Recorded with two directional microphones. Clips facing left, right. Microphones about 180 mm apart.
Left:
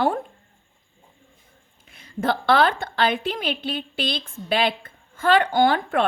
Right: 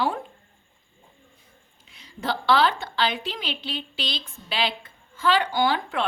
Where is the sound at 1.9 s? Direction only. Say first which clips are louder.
Left 5 dB; 55° left (ahead or behind).